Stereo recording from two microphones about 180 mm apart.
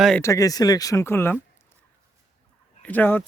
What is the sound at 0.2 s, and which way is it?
Speech, 20° left (ahead or behind).